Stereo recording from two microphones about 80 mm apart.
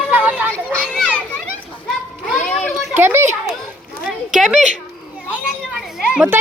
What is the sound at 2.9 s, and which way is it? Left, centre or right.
Speech, right.